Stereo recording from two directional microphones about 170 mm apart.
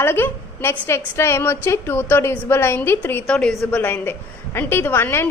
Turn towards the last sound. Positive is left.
turn(degrees=15)  # may be behind; listen again after turning